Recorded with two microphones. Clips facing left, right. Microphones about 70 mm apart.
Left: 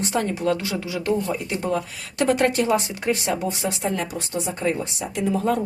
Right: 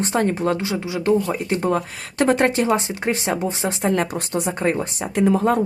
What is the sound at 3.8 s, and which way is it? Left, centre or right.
Speech, right.